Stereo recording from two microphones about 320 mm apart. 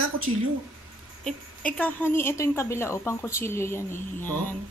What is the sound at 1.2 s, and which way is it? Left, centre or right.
A woman's voice, centre.